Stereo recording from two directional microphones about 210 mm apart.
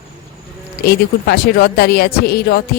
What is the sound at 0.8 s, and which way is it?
Speech, 50° left (ahead or behind).